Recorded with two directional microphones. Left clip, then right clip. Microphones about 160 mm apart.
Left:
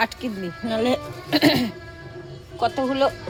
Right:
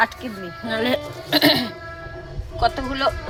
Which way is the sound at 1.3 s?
40° left (ahead or behind).